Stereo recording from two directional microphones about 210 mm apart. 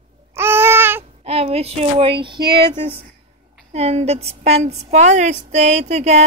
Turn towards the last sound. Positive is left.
turn(degrees=-30)  # may be behind; listen again after turning